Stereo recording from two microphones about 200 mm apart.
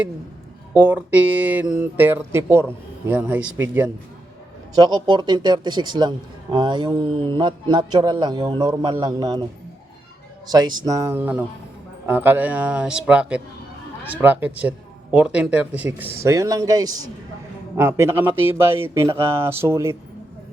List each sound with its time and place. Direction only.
0.7 s speech: 5° right (ahead or behind)
4.7 s a man's voice: 20° right (ahead or behind)
10.5 s speech: 20° right (ahead or behind)